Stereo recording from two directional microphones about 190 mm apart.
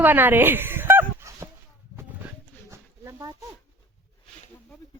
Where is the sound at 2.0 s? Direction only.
15° right (ahead or behind).